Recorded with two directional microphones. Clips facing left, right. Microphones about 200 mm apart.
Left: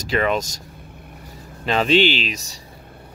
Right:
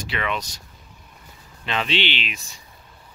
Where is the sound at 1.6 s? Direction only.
40° left (ahead or behind).